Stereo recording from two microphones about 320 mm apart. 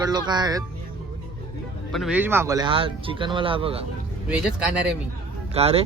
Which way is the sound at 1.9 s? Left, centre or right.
Centre.